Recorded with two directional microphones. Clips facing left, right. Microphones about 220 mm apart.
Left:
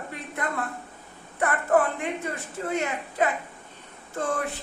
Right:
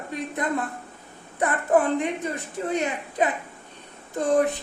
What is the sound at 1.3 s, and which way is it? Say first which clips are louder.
Speech: right 1 dB; 20° right (ahead or behind).